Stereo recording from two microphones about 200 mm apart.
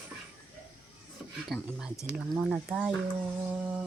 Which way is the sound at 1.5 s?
Centre (ahead or behind).